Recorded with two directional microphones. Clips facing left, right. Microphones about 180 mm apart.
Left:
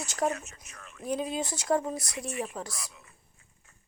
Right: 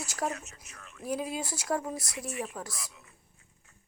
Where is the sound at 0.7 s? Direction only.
50° left (ahead or behind).